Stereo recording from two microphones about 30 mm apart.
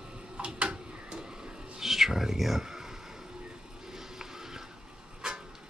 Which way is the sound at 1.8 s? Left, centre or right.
Centre.